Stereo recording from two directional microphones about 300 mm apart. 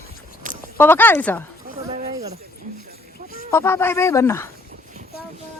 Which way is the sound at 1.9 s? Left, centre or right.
Centre.